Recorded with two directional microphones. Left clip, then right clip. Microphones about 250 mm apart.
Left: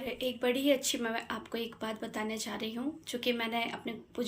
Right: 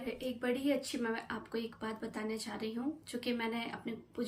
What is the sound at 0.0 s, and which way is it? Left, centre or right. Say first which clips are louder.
Speech: left 6 dB; centre.